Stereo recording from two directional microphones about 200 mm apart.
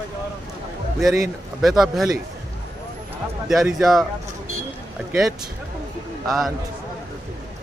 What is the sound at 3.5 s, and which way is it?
Speech, centre (ahead or behind).